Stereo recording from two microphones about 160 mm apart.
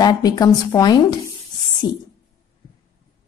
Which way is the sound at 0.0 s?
25° left (ahead or behind).